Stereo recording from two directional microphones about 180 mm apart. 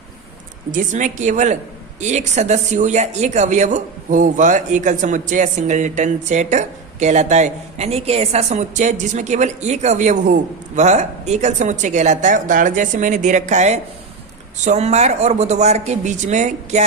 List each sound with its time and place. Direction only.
0.7 s speech: 45° right (ahead or behind)